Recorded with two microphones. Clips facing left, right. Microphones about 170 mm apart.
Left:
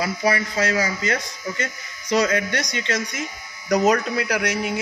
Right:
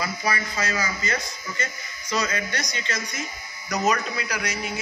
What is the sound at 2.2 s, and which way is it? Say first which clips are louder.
A man's voice: left 6 dB; 70° left (ahead or behind).